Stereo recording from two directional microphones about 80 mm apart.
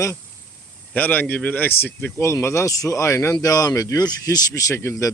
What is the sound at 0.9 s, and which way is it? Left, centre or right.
Speech, left.